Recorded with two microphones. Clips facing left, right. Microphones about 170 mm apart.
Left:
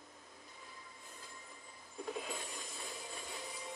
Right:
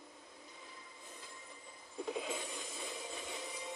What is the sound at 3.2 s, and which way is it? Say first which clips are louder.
Music: right 2 dB; 20° right (ahead or behind).